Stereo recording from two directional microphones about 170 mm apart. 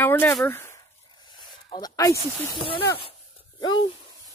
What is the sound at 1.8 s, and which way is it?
Speech, 20° left (ahead or behind).